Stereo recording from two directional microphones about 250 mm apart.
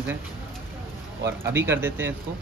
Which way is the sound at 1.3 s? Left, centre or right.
Centre.